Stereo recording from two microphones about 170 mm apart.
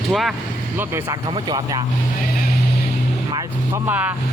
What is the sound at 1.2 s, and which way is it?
Speech, 25° right (ahead or behind).